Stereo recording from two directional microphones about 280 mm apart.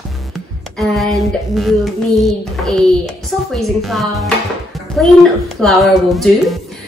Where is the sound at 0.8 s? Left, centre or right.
Centre.